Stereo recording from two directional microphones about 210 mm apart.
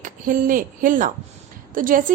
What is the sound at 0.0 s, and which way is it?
A woman's voice, 40° right (ahead or behind).